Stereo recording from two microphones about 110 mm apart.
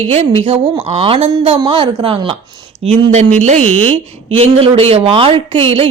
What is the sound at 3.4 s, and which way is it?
Speech, 90° right.